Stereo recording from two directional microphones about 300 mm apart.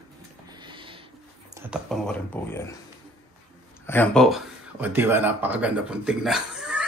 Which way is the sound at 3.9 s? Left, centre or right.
Centre.